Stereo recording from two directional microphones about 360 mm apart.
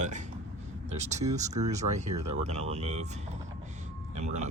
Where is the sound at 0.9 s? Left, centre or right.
Centre.